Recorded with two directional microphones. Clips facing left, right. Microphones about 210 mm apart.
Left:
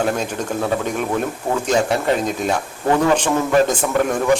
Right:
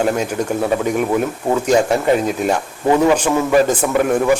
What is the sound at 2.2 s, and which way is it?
A man's voice, 10° right (ahead or behind).